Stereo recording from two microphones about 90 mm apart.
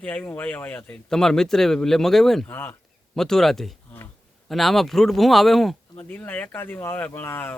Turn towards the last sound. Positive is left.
turn(degrees=20)  # may be behind; listen again after turning